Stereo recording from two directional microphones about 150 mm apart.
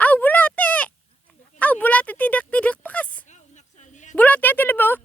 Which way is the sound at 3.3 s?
50° left (ahead or behind).